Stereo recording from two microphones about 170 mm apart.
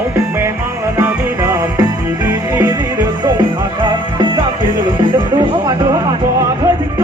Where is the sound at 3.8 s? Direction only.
30° right (ahead or behind).